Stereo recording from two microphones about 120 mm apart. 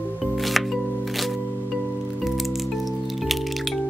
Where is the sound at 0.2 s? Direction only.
Centre (ahead or behind).